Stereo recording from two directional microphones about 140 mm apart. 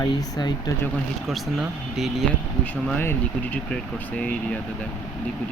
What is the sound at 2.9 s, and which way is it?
Speech, 15° left (ahead or behind).